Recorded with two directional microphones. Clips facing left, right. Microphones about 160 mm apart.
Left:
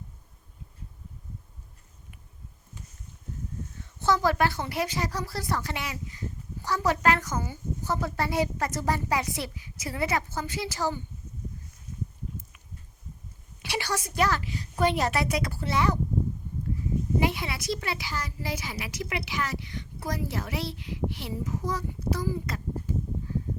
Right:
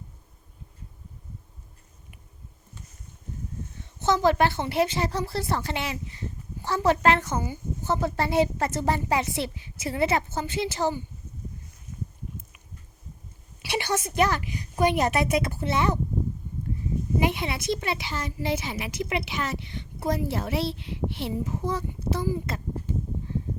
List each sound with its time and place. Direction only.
4.0 s a woman's voice: 20° right (ahead or behind)
13.7 s a woman's voice: 20° right (ahead or behind)
17.2 s a woman's voice: 20° right (ahead or behind)
22.3 s a sound: 25° right (ahead or behind)